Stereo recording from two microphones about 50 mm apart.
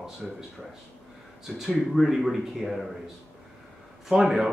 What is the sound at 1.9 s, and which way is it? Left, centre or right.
Speech, centre.